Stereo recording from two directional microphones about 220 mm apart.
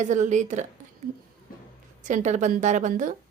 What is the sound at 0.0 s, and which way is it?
Speech, 35° right (ahead or behind).